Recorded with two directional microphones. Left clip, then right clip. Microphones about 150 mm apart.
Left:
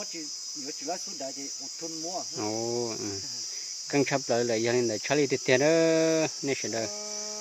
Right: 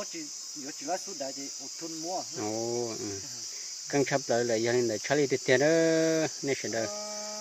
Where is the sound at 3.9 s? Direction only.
20° left (ahead or behind).